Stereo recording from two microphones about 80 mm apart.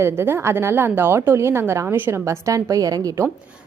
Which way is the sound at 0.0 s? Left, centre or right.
Right.